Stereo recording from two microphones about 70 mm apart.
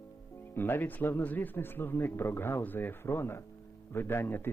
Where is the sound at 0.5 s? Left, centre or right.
Left.